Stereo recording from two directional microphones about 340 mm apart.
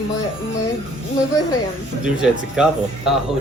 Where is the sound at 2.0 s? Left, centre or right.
Centre.